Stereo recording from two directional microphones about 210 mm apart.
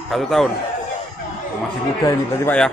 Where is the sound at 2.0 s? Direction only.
10° left (ahead or behind).